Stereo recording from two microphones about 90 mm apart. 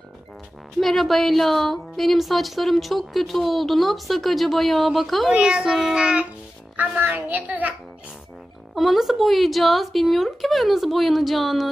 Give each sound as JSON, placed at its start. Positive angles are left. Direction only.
{"t": 0.7, "sound": "a woman's voice", "side_deg": 0}
{"t": 8.7, "sound": "a woman's voice", "side_deg": 0}